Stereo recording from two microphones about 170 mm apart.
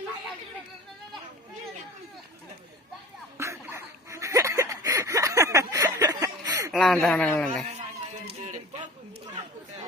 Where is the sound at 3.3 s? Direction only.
15° right (ahead or behind).